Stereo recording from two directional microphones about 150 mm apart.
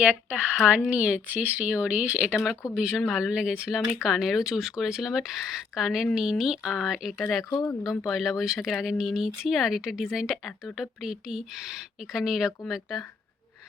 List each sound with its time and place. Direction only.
0.0 s speech: 10° right (ahead or behind)
7.5 s speech: 20° left (ahead or behind)
7.9 s speech: centre (ahead or behind)